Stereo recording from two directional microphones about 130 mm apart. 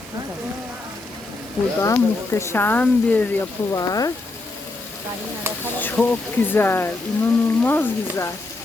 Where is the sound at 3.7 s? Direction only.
30° left (ahead or behind).